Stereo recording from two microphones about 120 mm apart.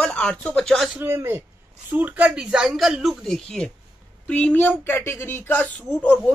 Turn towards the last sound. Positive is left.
turn(degrees=10)  # may be behind; listen again after turning